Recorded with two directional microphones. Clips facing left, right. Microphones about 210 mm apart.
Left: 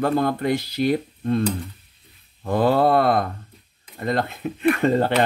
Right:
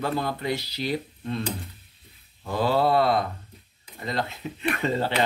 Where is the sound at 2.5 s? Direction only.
55° left (ahead or behind).